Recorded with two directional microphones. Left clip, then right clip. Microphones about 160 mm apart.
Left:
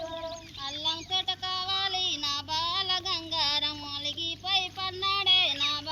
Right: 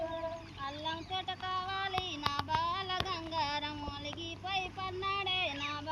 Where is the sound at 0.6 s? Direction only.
20° right (ahead or behind).